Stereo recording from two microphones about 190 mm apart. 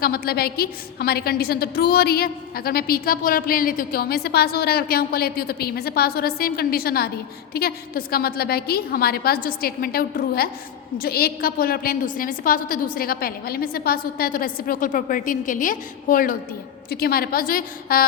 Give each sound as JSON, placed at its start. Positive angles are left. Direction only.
{"t": 0.0, "sound": "a woman's voice", "side_deg": 55}